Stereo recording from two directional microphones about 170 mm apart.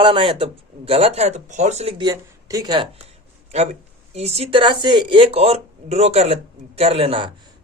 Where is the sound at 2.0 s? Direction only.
20° right (ahead or behind).